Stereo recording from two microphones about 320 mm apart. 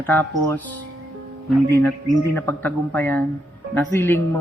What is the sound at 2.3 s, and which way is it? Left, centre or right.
A man's voice, centre.